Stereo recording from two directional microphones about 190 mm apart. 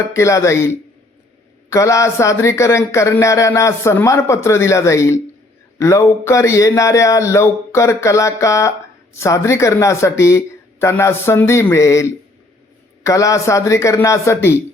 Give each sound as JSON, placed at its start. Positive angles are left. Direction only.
{"t": 0.0, "sound": "speech", "side_deg": 15}